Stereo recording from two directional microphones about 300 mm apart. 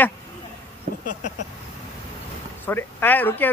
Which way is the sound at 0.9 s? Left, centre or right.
Right.